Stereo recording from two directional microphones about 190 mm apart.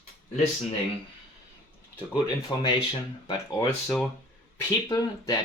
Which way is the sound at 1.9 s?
25° left (ahead or behind).